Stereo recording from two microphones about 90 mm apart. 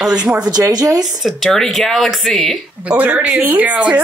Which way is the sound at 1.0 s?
5° right (ahead or behind).